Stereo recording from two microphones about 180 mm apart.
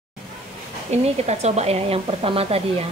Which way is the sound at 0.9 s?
40° right (ahead or behind).